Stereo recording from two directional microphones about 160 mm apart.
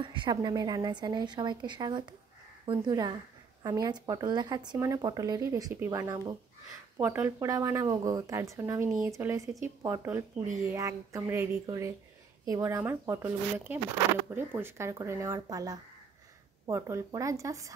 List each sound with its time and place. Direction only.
0.0 s speech: 30° right (ahead or behind)